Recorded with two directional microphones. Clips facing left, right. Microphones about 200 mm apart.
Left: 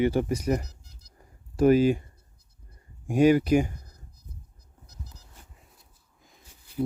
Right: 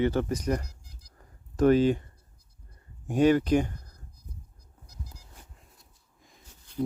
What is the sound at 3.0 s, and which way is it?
Speech, 10° left (ahead or behind).